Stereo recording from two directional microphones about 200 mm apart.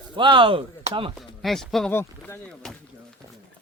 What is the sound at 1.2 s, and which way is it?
Speech, centre (ahead or behind).